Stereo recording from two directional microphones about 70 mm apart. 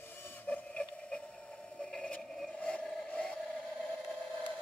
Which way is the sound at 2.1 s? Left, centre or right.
Centre.